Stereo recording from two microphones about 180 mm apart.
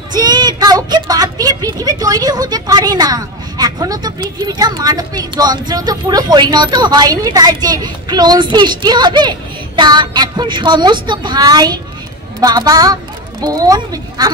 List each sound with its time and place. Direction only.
0.1 s speech: 25° right (ahead or behind)